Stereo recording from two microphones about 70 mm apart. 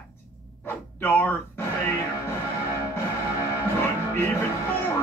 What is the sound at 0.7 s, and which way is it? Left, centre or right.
Speech, left.